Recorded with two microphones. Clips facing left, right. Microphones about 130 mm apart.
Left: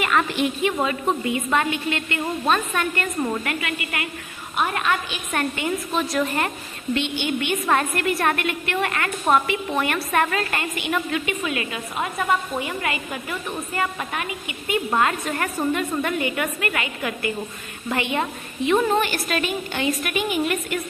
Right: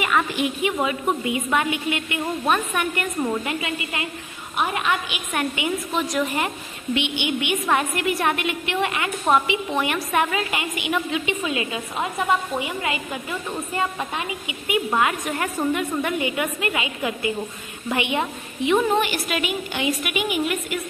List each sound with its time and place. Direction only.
0.0 s a woman's voice: 10° right (ahead or behind)